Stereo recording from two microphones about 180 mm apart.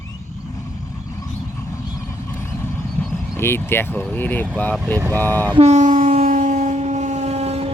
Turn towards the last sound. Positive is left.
turn(degrees=-35)  # may be behind; listen again after turning